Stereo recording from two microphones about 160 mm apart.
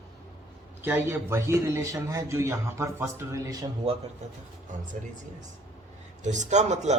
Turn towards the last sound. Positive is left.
turn(degrees=-45)  # may be behind; listen again after turning